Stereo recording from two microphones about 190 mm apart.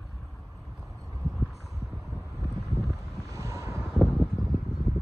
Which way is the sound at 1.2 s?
Centre (ahead or behind).